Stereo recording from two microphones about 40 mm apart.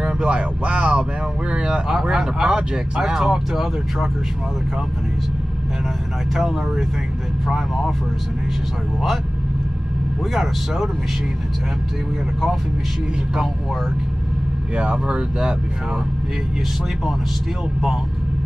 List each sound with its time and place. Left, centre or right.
0.3 s speech: right
1.5 s a sound: right
1.9 s speech: centre
6.3 s speech: centre
10.3 s speech: centre
14.8 s speech: right